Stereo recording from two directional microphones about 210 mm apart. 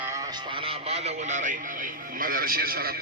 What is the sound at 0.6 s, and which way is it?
A man's voice, 30° right (ahead or behind).